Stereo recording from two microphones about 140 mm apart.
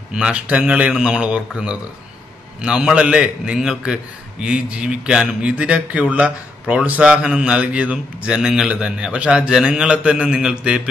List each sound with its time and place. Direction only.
0.1 s a man's voice: 5° right (ahead or behind)